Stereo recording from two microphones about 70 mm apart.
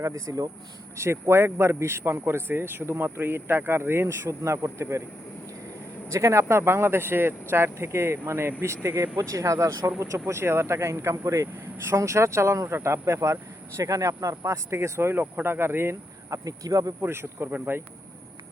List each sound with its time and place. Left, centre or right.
0.0 s speech: right
0.9 s speech: right
6.1 s speech: right
16.3 s speech: right
17.0 s speech: right